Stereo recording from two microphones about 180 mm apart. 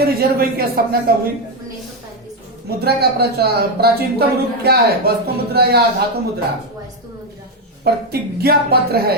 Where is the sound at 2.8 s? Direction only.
60° right (ahead or behind).